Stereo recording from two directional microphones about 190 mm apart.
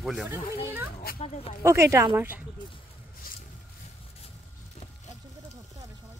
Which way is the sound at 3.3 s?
50° left (ahead or behind).